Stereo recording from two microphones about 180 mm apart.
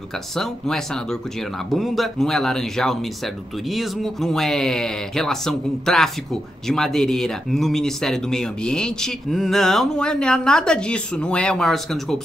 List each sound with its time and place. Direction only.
0.4 s speech: centre (ahead or behind)